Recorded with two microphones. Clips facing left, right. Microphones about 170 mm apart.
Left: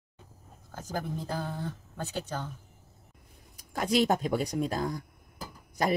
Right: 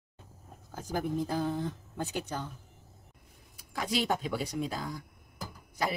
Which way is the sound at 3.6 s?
45° left (ahead or behind).